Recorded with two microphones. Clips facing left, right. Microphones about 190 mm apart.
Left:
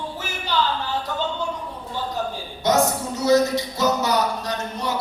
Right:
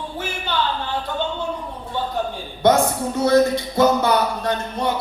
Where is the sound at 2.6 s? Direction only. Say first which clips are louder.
Right 3 dB; 55° right (ahead or behind).